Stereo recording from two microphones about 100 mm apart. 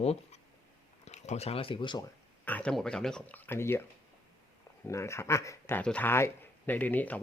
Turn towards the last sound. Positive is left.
turn(degrees=15)  # may be behind; listen again after turning